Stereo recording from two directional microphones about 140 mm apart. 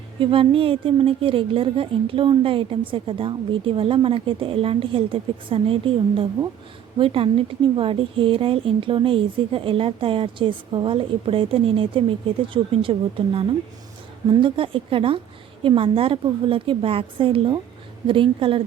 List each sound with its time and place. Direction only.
0.2 s speech: 40° right (ahead or behind)